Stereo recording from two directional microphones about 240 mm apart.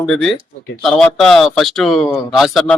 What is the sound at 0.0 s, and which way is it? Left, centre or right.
Speech, centre.